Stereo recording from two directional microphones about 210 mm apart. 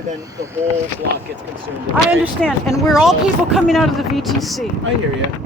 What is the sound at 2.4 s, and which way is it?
Speech, centre (ahead or behind).